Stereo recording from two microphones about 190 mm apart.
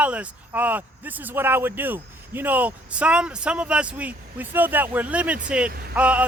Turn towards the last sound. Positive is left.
turn(degrees=-5)  # may be behind; listen again after turning